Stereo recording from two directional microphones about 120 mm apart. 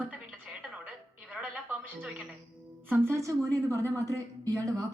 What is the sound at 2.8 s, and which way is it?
A woman's voice, 20° right (ahead or behind).